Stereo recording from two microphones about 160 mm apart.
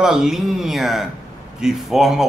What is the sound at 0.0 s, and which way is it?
A man's voice, 5° right (ahead or behind).